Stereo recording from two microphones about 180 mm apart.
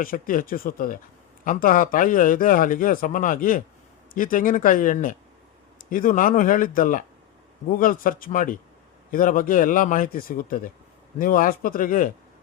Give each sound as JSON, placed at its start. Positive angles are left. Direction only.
{"t": 0.0, "sound": "speech", "side_deg": 50}